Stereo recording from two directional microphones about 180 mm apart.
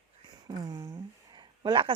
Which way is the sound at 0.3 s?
20° right (ahead or behind).